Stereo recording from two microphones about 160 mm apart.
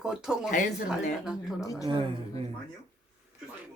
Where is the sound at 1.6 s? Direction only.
20° left (ahead or behind).